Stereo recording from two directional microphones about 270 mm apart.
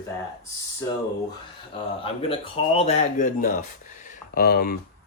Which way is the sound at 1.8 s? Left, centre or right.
Centre.